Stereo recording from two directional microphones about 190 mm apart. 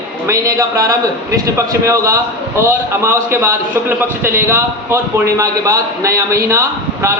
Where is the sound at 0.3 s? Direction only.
15° right (ahead or behind).